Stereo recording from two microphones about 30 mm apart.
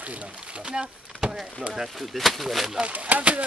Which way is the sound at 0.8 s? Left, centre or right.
Centre.